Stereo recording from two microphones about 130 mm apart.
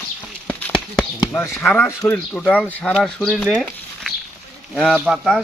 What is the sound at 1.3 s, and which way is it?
Speech, 15° left (ahead or behind).